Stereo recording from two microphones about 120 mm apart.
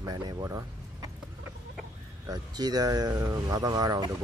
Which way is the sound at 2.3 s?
35° right (ahead or behind).